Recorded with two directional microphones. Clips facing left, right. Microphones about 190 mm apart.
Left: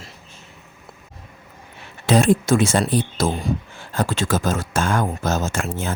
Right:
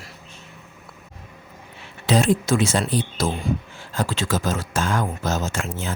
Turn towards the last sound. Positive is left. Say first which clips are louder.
# left 3 dB
turn(degrees=50)  # may be behind; listen again after turning